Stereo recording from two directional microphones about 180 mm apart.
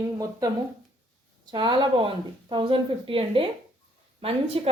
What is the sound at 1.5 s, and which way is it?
A woman's voice, 25° right (ahead or behind).